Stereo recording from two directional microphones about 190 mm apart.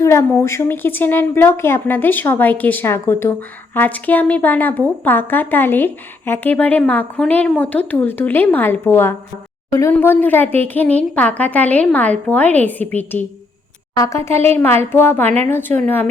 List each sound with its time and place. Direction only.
0.0 s speech: 15° left (ahead or behind)